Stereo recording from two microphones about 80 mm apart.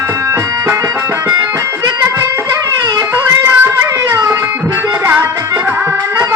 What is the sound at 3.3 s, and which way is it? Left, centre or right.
Music, right.